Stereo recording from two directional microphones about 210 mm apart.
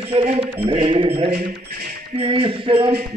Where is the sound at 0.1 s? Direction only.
25° right (ahead or behind).